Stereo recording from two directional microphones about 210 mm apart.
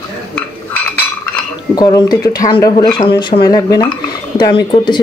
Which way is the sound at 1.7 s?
20° left (ahead or behind).